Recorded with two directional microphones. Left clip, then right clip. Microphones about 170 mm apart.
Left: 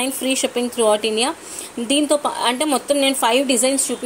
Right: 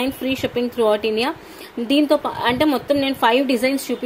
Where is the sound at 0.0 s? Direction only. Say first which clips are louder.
Left 2 dB; centre (ahead or behind).